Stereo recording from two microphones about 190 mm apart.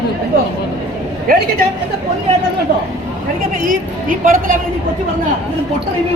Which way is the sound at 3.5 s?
45° right (ahead or behind).